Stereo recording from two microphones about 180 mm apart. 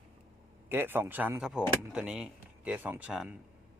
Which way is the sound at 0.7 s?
10° right (ahead or behind).